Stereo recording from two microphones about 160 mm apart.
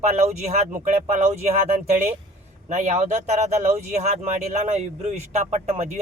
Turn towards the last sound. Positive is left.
turn(degrees=-45)  # may be behind; listen again after turning